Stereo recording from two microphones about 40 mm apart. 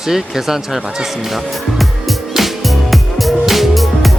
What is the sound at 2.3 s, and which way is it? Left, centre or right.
Music, centre.